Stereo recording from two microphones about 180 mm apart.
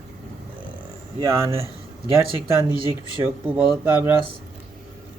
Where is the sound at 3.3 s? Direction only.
5° right (ahead or behind).